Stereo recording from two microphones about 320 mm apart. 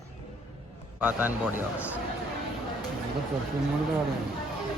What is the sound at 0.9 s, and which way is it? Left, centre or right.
A man's voice, centre.